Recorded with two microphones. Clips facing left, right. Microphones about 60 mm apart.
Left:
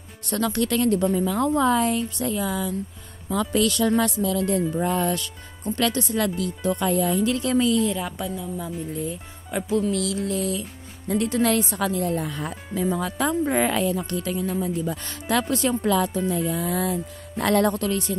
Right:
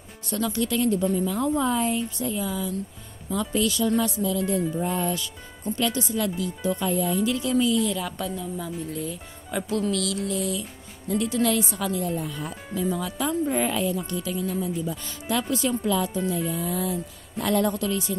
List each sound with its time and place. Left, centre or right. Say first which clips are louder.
0.3 s speech: left 2 dB; left
4.8 s speech: left 3 dB; left
7.8 s speech: left 2 dB; left
8.2 s speech: left 1 dB; centre
9.5 s music: left 2 dB; centre
9.9 s speech: left 2 dB; left
10.2 s music: left 2 dB; left
11.1 s speech: left 2 dB; left
13.5 s speech: left 3 dB; left
14.7 s speech: left 2 dB; left